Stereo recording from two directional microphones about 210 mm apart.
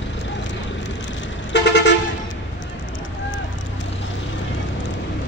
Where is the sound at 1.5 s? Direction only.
55° left (ahead or behind).